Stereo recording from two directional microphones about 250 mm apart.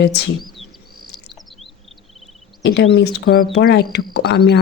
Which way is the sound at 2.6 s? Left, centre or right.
Left.